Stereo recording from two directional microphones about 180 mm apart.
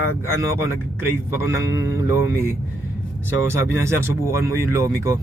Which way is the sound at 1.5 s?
15° right (ahead or behind).